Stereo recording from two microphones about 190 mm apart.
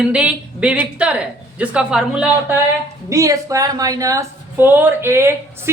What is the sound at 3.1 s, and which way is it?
Speech, 15° right (ahead or behind).